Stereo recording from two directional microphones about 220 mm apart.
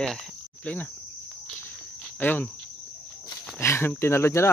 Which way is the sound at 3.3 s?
10° left (ahead or behind).